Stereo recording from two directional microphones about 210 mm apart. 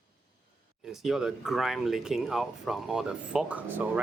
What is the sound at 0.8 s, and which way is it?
Speech, centre (ahead or behind).